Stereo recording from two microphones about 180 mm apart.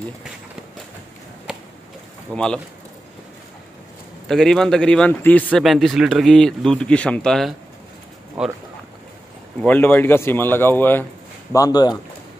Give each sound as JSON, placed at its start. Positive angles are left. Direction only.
{"t": 1.5, "sound": "a sound", "side_deg": -5}
{"t": 2.3, "sound": "speech", "side_deg": 5}
{"t": 4.3, "sound": "speech", "side_deg": 5}
{"t": 9.6, "sound": "a man's voice", "side_deg": 10}